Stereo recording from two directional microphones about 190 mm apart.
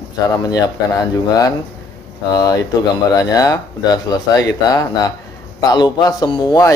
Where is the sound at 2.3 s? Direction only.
20° left (ahead or behind).